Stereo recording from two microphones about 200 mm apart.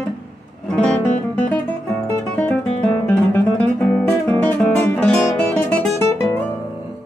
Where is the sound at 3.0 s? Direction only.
10° left (ahead or behind).